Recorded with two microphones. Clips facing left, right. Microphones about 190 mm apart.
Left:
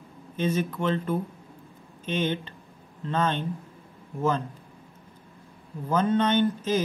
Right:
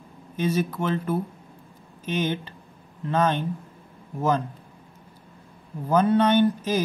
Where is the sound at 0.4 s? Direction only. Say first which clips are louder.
Right 2 dB; 10° right (ahead or behind).